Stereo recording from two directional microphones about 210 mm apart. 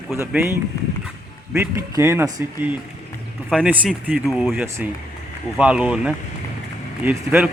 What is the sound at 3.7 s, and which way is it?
Speech, 5° right (ahead or behind).